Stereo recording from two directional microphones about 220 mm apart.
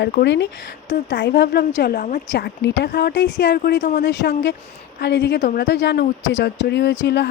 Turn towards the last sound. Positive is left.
turn(degrees=50)  # may be behind; listen again after turning